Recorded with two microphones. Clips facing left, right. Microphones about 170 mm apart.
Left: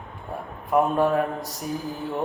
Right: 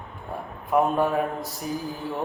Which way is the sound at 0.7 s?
Centre (ahead or behind).